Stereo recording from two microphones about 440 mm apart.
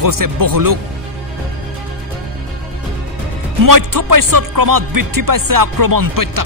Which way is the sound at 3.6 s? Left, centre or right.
Right.